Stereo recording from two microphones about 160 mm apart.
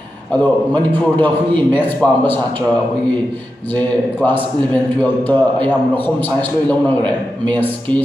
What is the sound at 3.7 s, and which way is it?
A man's voice, 10° left (ahead or behind).